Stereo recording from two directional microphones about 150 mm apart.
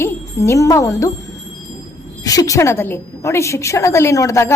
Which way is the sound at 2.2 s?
25° left (ahead or behind).